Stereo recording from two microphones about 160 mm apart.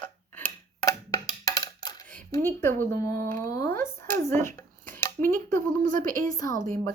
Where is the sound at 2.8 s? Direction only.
15° left (ahead or behind).